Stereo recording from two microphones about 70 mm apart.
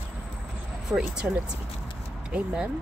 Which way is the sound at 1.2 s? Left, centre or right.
Centre.